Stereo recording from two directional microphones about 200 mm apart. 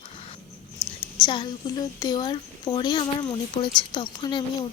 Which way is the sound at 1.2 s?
25° left (ahead or behind).